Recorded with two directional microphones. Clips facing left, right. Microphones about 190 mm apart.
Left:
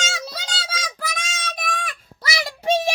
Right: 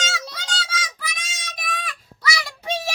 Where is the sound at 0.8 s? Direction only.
50° left (ahead or behind).